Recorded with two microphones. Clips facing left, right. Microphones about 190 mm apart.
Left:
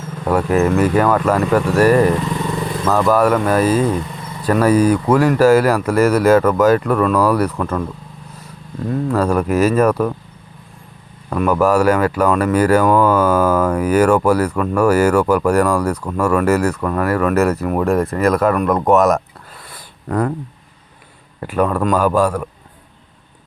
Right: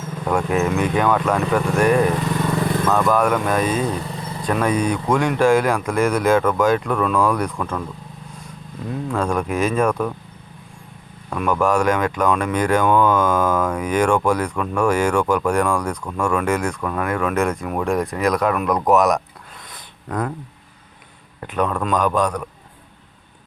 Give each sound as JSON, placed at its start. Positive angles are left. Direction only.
{"t": 0.3, "sound": "speech", "side_deg": 5}
{"t": 8.9, "sound": "speech", "side_deg": 5}
{"t": 11.3, "sound": "speech", "side_deg": 5}
{"t": 19.7, "sound": "a sound", "side_deg": 5}
{"t": 21.4, "sound": "speech", "side_deg": 5}